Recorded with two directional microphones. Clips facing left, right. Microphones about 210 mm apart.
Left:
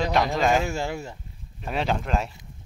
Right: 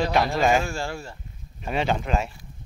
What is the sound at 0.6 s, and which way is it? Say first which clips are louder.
Speech: left 2 dB; 20° left (ahead or behind).